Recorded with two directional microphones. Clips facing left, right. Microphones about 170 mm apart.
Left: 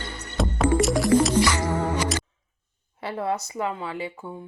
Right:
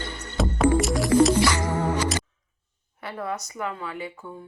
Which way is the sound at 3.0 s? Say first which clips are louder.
Left 4 dB; 25° left (ahead or behind).